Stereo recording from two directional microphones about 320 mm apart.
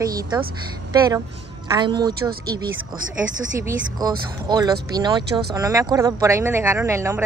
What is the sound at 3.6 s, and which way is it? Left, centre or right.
Speech, centre.